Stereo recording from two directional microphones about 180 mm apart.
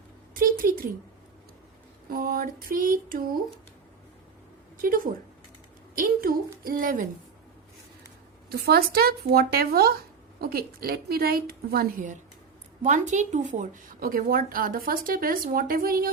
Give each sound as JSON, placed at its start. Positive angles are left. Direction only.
{"t": 0.3, "sound": "a sound", "side_deg": -55}
{"t": 2.0, "sound": "a woman's voice", "side_deg": -55}
{"t": 4.8, "sound": "a woman's voice", "side_deg": -50}
{"t": 8.4, "sound": "a woman's voice", "side_deg": -60}
{"t": 12.8, "sound": "a woman's voice", "side_deg": -40}